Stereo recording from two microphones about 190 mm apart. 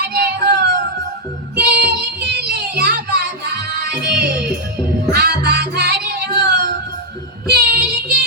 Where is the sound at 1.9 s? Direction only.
60° right (ahead or behind).